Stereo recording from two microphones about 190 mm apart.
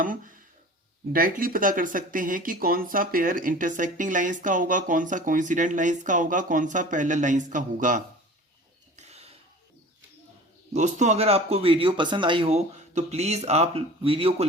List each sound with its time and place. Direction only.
0.0 s speech: 45° right (ahead or behind)
9.0 s a sound: 35° right (ahead or behind)
10.8 s speech: 40° right (ahead or behind)